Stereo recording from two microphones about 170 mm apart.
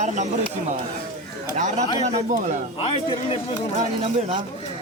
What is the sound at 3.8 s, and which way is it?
Speech, 40° right (ahead or behind).